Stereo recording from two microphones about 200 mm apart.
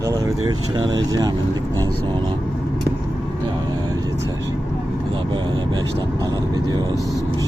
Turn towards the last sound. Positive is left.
turn(degrees=-20)  # may be behind; listen again after turning